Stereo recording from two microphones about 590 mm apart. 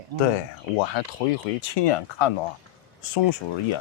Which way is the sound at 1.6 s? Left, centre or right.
Left.